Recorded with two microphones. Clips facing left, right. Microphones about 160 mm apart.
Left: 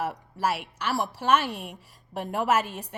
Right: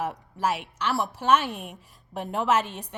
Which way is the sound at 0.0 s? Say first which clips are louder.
Even; 10° left (ahead or behind).